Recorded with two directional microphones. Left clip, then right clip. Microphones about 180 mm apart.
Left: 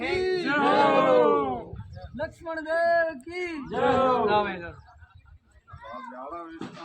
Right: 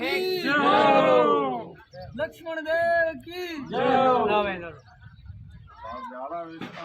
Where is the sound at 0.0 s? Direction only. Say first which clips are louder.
Even; 15° left (ahead or behind).